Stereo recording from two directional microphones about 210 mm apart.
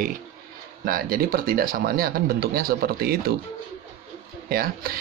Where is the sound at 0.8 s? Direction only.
45° right (ahead or behind).